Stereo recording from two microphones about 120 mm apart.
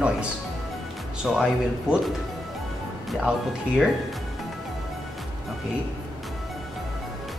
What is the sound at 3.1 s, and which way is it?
Speech, centre (ahead or behind).